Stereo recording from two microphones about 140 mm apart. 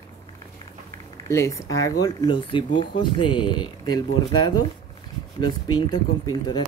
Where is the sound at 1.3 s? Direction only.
20° left (ahead or behind).